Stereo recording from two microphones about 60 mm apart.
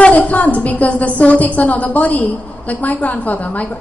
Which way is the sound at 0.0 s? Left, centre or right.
Left.